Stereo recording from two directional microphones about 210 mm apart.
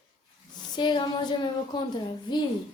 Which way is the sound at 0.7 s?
20° left (ahead or behind).